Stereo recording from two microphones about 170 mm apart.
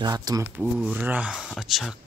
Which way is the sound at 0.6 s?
5° right (ahead or behind).